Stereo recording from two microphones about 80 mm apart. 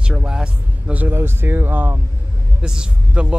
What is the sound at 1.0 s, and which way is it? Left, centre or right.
Speech, right.